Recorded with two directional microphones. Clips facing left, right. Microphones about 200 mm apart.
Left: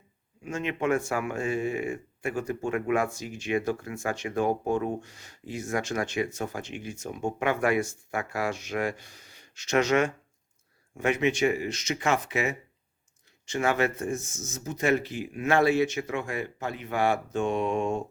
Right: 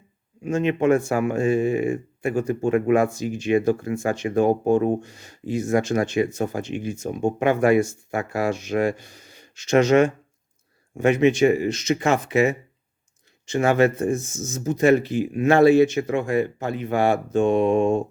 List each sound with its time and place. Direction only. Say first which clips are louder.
0.4 s speech: right 9 dB; 30° right (ahead or behind)
14.6 s speech: right 8 dB; 40° right (ahead or behind)